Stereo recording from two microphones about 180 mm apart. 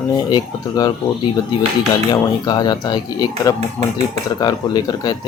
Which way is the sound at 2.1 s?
25° left (ahead or behind).